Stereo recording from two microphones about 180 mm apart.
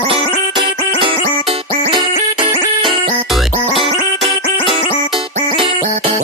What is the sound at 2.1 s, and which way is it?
Music, 45° left (ahead or behind).